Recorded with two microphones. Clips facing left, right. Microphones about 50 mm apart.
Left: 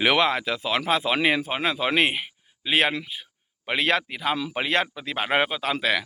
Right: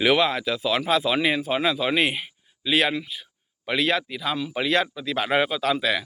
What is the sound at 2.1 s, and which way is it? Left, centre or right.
Speech, left.